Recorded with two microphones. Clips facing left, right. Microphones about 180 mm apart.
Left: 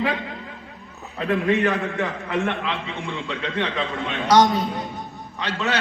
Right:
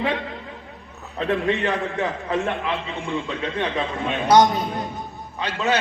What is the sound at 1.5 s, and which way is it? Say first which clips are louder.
A man's voice: left 2 dB; 20° right (ahead or behind).